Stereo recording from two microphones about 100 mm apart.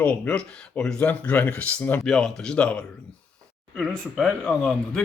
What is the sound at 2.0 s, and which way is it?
Speech, 5° left (ahead or behind).